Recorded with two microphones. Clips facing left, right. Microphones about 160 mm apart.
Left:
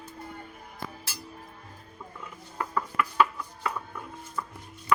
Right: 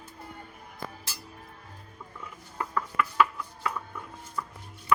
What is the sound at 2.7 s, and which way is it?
Chopping, 15° left (ahead or behind).